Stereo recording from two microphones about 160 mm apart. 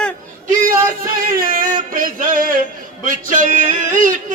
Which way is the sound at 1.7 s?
55° right (ahead or behind).